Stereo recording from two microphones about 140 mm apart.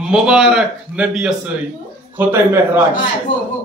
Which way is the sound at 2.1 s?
15° right (ahead or behind).